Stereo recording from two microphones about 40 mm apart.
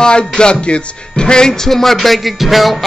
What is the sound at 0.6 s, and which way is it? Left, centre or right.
Speech, left.